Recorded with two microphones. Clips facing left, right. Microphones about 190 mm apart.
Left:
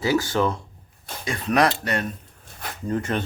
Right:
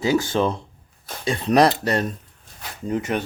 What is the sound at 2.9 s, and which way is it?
Speech, 15° right (ahead or behind).